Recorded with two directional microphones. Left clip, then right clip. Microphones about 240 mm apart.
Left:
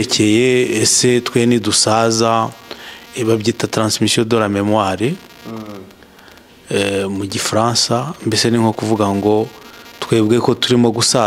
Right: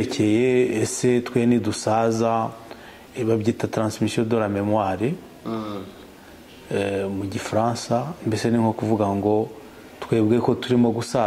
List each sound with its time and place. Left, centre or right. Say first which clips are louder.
0.0 s speech: left 7 dB; left
5.5 s speech: right 1 dB; centre
6.7 s speech: left 7 dB; left